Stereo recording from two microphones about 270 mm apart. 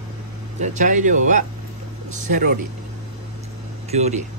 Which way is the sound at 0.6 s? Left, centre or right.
Right.